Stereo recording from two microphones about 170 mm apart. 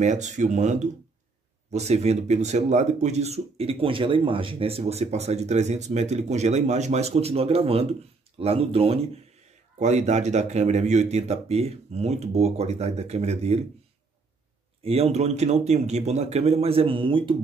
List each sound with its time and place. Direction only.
0.0 s speech: 45° right (ahead or behind)
14.8 s speech: 35° right (ahead or behind)